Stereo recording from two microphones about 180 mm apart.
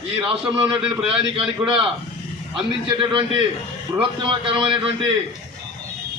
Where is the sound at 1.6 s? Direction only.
5° right (ahead or behind).